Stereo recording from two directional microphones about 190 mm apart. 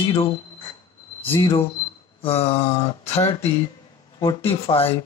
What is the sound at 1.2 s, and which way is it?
Speech, 30° left (ahead or behind).